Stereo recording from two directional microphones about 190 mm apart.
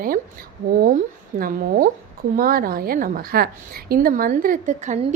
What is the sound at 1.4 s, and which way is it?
A woman's voice, 50° right (ahead or behind).